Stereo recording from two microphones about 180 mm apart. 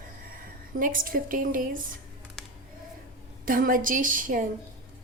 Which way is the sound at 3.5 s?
50° right (ahead or behind).